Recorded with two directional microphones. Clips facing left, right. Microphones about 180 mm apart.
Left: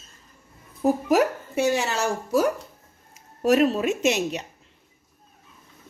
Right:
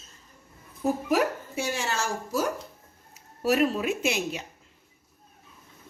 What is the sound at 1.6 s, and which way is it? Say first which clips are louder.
Speech: left 7 dB; 65° left (ahead or behind).